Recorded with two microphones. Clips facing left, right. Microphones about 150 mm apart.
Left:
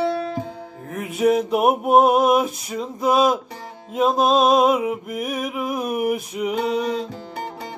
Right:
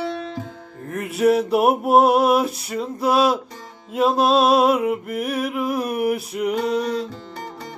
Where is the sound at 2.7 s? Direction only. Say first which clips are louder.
Even; 5° right (ahead or behind).